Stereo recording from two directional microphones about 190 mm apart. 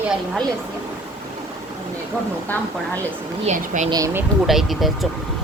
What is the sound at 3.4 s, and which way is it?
Speech, 40° right (ahead or behind).